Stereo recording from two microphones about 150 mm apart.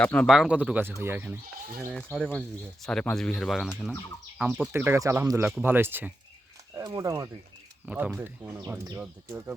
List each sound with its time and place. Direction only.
0.0 s speech: 5° left (ahead or behind)
0.3 s speech: 5° right (ahead or behind)
2.1 s speech: centre (ahead or behind); by 7.3 s 25° right (ahead or behind)
7.9 s speech: 10° right (ahead or behind)